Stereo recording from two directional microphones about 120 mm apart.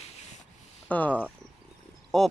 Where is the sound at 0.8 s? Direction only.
10° left (ahead or behind).